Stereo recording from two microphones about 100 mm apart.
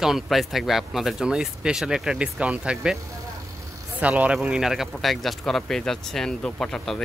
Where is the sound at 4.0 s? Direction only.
15° right (ahead or behind).